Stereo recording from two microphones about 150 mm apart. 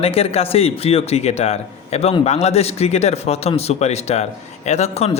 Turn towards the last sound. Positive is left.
turn(degrees=45)  # may be behind; listen again after turning